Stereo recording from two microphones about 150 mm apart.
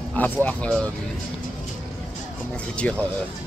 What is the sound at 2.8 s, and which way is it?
Speech, 10° left (ahead or behind).